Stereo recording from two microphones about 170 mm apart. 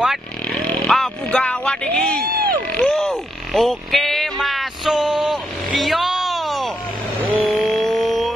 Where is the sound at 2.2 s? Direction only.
60° right (ahead or behind).